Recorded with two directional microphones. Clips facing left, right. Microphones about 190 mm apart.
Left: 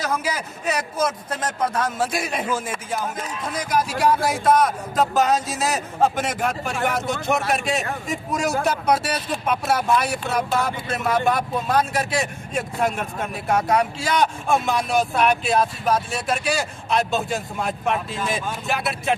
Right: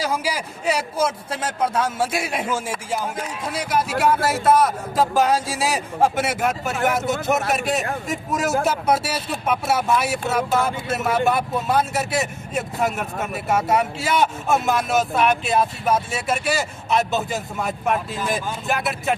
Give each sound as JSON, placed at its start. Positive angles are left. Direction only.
{"t": 0.0, "sound": "a man's voice", "side_deg": -10}